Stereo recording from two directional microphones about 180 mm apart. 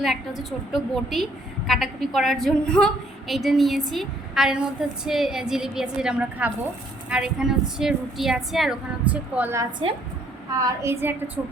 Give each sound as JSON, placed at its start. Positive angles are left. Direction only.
{"t": 0.0, "sound": "a woman's voice", "side_deg": 0}